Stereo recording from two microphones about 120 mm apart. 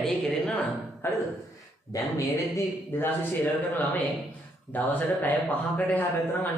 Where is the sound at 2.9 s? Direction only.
15° left (ahead or behind).